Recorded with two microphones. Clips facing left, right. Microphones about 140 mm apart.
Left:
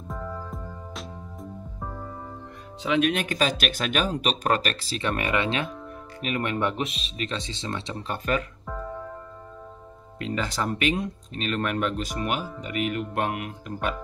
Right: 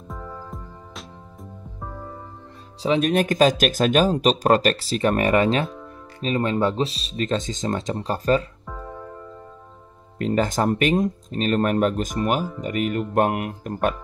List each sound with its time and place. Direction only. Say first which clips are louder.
0.1 s music: left 1 dB; centre (ahead or behind)
2.8 s speech: right 4 dB; 35° right (ahead or behind)
6.2 s speech: right 5 dB; 30° right (ahead or behind)
10.1 s speech: right 7 dB; 45° right (ahead or behind)